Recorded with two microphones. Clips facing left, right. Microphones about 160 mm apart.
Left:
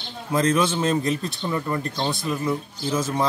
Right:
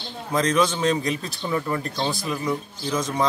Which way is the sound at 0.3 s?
5° left (ahead or behind).